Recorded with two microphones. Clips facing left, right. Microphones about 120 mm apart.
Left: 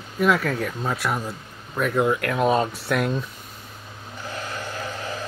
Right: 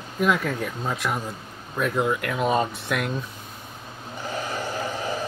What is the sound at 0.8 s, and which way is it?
Speech, 5° left (ahead or behind).